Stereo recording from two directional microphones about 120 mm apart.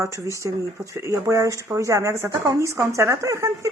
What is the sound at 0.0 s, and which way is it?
Speech, 25° right (ahead or behind).